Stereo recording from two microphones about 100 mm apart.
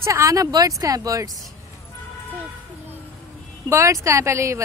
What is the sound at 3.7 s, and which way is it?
Speech, 30° right (ahead or behind).